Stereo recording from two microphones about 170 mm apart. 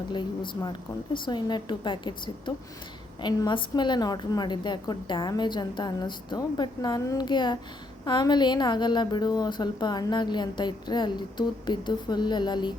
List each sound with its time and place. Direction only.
0.1 s a woman's voice: 25° left (ahead or behind)